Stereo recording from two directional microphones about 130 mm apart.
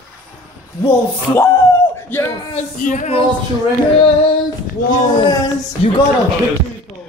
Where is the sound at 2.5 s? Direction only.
70° left (ahead or behind).